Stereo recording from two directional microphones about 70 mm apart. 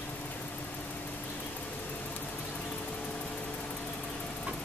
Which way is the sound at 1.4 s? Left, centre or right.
Left.